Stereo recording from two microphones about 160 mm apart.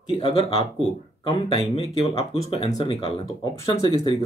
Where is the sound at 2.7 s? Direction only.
25° left (ahead or behind).